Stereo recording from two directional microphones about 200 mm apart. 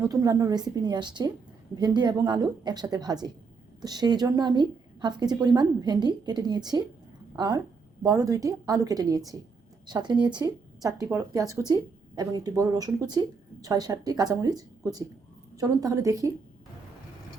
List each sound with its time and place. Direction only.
0.0 s a woman's voice: 15° right (ahead or behind)